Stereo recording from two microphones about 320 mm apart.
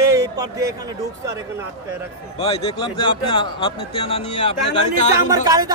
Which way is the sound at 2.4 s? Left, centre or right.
Centre.